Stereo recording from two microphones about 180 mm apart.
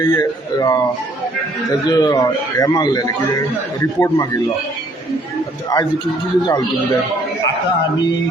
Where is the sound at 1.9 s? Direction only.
20° left (ahead or behind).